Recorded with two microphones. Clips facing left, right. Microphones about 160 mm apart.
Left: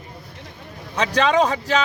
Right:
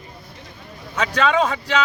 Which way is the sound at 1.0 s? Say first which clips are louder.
Left 1 dB; 35° left (ahead or behind).